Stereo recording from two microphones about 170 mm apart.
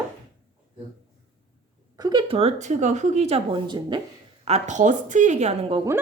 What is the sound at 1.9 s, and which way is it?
Speech, 25° right (ahead or behind).